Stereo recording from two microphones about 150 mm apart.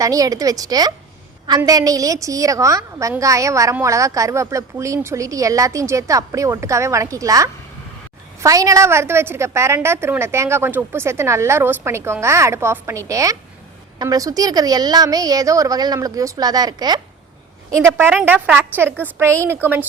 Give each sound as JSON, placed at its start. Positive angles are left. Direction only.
{"t": 0.0, "sound": "a woman's voice", "side_deg": -25}
{"t": 18.1, "sound": "a woman's voice", "side_deg": -5}